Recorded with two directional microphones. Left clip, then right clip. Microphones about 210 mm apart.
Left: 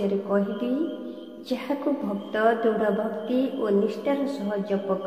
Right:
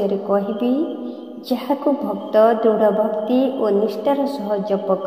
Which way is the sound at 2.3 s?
20° right (ahead or behind).